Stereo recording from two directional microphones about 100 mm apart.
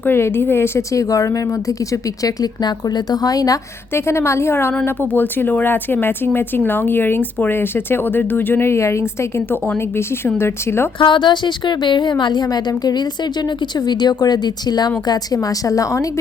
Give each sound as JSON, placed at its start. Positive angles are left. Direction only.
{"t": 0.0, "sound": "a woman's voice", "side_deg": 25}
{"t": 3.9, "sound": "speech", "side_deg": 25}
{"t": 10.2, "sound": "speech", "side_deg": 25}
{"t": 11.0, "sound": "a woman's voice", "side_deg": 50}